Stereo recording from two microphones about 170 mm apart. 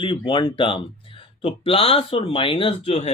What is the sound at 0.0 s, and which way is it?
Speech, 30° left (ahead or behind).